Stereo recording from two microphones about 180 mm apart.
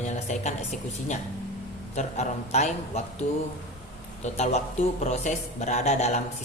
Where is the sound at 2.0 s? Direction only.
40° left (ahead or behind).